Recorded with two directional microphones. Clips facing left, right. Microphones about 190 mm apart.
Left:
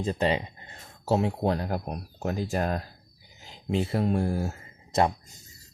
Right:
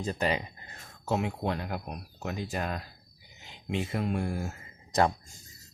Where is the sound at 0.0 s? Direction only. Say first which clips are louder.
Left 4 dB; 25° left (ahead or behind).